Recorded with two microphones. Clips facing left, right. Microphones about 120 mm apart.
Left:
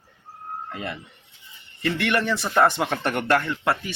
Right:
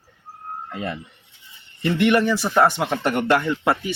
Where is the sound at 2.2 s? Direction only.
10° right (ahead or behind).